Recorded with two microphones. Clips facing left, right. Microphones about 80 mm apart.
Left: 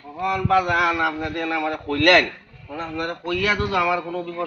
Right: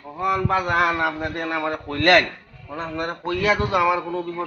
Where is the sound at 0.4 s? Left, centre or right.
Right.